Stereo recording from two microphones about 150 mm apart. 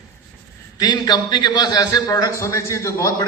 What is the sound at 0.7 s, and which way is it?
A man's voice, 25° left (ahead or behind).